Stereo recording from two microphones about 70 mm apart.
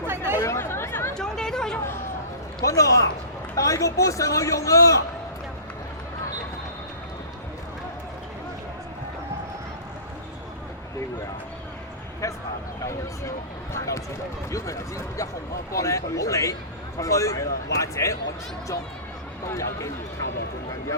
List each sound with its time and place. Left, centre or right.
0.3 s chatter: left
1.1 s chatter: centre
2.6 s a man's voice: left
12.2 s a sound: left
13.7 s a man's voice: left
19.5 s a man's voice: left